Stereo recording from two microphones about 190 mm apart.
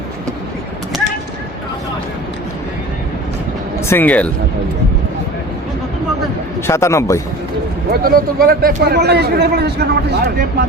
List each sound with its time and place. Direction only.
3.8 s speech: 10° left (ahead or behind)
6.7 s a man's voice: 15° left (ahead or behind)
7.9 s a man's voice: 50° right (ahead or behind)